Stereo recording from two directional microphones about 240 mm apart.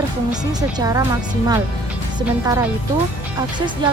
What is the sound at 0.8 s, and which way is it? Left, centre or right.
Speech, centre.